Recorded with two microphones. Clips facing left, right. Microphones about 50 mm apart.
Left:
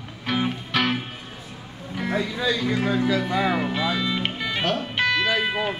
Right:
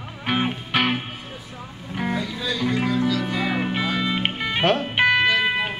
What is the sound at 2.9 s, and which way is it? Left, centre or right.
Music, left.